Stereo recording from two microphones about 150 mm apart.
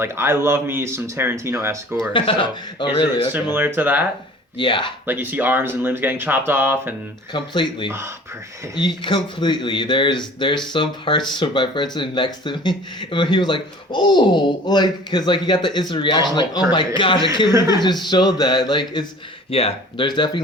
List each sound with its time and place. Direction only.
0.0 s speech: 15° right (ahead or behind)
2.1 s speech: 35° left (ahead or behind)
3.5 s speech: 15° right (ahead or behind)
4.5 s speech: 35° left (ahead or behind)
5.0 s speech: 10° right (ahead or behind)
7.3 s speech: 30° left (ahead or behind)
9.0 s speech: 30° left (ahead or behind)
19.5 s speech: 40° left (ahead or behind)